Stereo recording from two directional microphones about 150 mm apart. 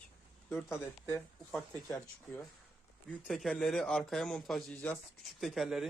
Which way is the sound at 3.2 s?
Centre (ahead or behind).